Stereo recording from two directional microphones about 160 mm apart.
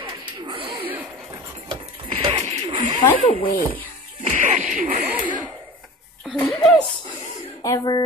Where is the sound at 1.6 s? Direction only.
35° right (ahead or behind).